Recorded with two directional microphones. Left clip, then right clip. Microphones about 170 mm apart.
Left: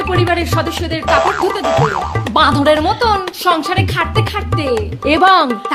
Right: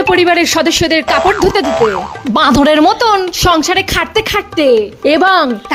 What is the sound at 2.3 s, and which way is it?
Speech, 55° right (ahead or behind).